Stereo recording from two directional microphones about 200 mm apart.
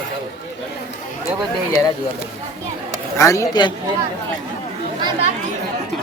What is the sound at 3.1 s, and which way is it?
Speech, 15° left (ahead or behind).